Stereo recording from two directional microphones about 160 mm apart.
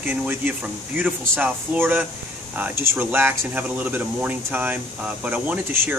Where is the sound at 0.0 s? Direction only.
10° right (ahead or behind).